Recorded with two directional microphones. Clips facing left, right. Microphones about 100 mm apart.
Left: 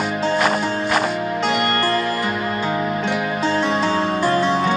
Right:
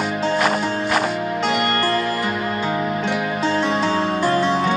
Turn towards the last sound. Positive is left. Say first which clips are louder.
# even
turn(degrees=30)  # may be behind; listen again after turning